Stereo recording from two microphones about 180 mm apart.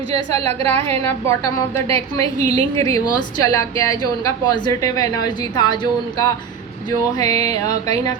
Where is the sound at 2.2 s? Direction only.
35° right (ahead or behind).